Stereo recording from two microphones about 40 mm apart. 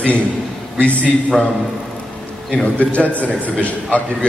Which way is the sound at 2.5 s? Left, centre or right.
Left.